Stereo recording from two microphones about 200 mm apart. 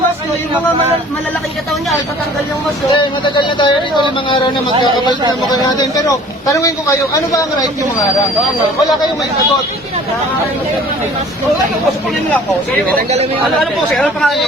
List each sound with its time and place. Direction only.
2.9 s speech: 25° left (ahead or behind)
5.5 s a man's voice: 20° left (ahead or behind)
13.0 s speech: 35° right (ahead or behind)
13.6 s speech: centre (ahead or behind)